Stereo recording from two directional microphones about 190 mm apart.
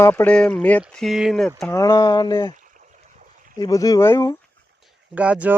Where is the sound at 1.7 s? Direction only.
15° left (ahead or behind).